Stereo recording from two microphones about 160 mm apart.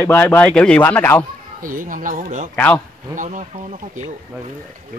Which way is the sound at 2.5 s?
10° left (ahead or behind).